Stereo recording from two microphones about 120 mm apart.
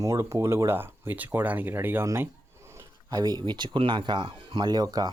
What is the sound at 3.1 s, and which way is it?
Speech, 35° right (ahead or behind).